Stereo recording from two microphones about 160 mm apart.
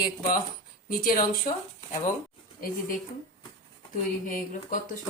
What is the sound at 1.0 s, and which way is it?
Speech, 60° left (ahead or behind).